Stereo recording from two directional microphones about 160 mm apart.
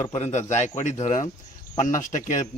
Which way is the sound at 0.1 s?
45° left (ahead or behind).